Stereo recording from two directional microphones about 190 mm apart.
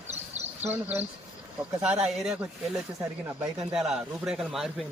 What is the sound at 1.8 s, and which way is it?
Speech, 5° right (ahead or behind).